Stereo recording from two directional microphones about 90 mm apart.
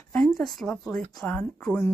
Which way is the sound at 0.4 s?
5° left (ahead or behind).